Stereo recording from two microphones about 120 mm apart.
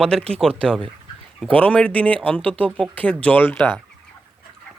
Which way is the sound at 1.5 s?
10° left (ahead or behind).